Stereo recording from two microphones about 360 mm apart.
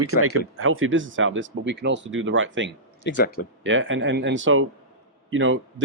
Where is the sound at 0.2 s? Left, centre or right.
Right.